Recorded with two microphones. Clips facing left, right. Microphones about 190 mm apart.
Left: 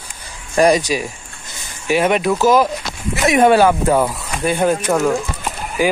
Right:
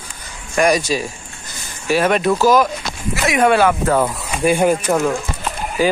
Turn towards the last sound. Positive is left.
turn(degrees=15)  # may be behind; listen again after turning